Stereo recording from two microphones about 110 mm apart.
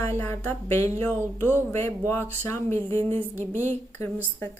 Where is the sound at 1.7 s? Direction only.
20° left (ahead or behind).